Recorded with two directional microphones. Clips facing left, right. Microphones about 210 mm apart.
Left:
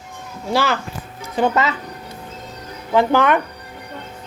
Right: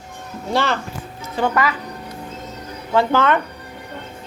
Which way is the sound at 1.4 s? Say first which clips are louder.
Left 2 dB; 25° left (ahead or behind).